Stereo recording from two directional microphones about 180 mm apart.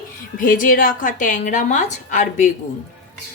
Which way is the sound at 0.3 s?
50° left (ahead or behind).